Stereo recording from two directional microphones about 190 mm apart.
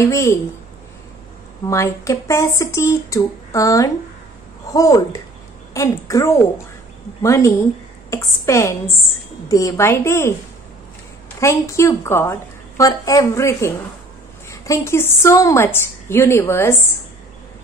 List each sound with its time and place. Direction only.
0.0 s a woman's voice: 15° left (ahead or behind)
1.7 s a woman's voice: 15° left (ahead or behind)
11.3 s a woman's voice: 15° left (ahead or behind)